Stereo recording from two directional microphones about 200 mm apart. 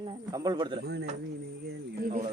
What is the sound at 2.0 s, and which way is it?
Speech, 40° right (ahead or behind).